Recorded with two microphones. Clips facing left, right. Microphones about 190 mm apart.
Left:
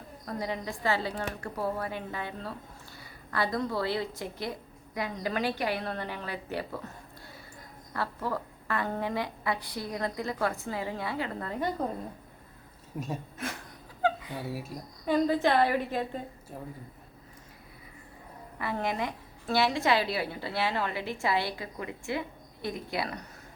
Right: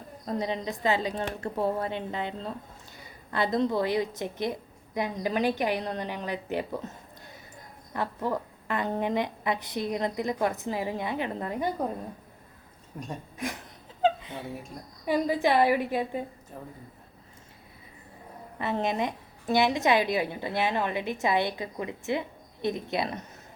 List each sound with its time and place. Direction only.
0.3 s a woman's voice: 20° right (ahead or behind)
7.9 s a woman's voice: 20° right (ahead or behind)
12.9 s speech: 5° left (ahead or behind)
14.0 s a sound: 20° right (ahead or behind)
14.4 s speech: 5° left (ahead or behind)
15.0 s a woman's voice: 10° right (ahead or behind)
18.6 s a woman's voice: 20° right (ahead or behind)